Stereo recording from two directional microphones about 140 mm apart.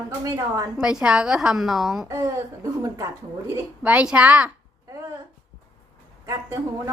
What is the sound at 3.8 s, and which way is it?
Speech, 10° right (ahead or behind).